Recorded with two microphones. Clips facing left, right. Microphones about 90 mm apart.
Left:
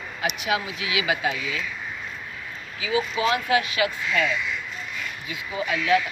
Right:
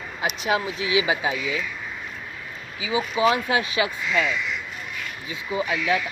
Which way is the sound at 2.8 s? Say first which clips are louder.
Right 2 dB; 20° right (ahead or behind).